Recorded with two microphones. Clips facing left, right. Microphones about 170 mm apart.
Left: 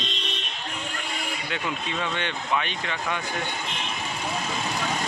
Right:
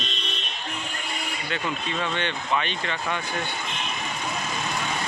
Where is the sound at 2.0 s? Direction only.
5° left (ahead or behind).